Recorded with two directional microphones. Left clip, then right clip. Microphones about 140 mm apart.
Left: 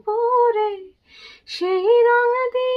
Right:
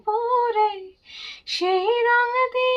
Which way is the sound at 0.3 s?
40° right (ahead or behind).